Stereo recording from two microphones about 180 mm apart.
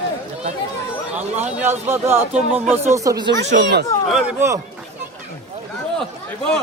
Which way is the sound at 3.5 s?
65° right (ahead or behind).